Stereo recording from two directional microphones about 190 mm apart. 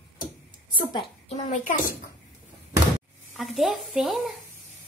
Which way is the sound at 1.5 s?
45° left (ahead or behind).